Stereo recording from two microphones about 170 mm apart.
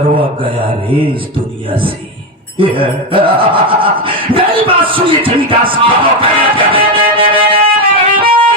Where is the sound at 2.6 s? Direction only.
30° right (ahead or behind).